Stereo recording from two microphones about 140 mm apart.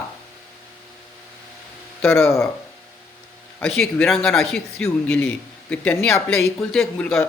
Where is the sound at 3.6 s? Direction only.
5° left (ahead or behind).